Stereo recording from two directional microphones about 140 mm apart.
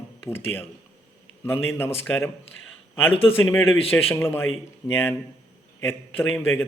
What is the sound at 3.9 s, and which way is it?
A man's voice, 20° left (ahead or behind).